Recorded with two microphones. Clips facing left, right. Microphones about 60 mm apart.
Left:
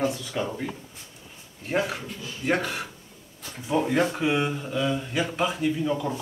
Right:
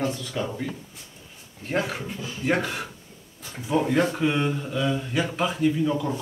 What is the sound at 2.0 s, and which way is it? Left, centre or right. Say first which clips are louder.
Speech: right 3 dB; centre.